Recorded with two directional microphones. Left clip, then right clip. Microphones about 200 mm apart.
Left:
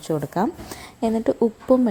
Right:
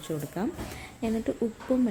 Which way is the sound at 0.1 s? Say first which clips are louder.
Left 10 dB; 20° left (ahead or behind).